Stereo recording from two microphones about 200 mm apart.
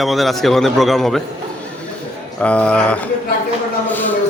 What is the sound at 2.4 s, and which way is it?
A man's voice, 5° left (ahead or behind).